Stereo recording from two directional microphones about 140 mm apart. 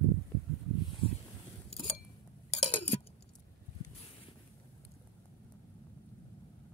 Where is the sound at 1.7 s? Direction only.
40° left (ahead or behind).